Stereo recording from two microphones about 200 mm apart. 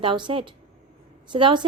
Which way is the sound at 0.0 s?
25° right (ahead or behind).